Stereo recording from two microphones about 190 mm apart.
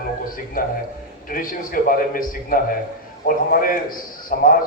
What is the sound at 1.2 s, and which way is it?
A man's voice, 45° left (ahead or behind).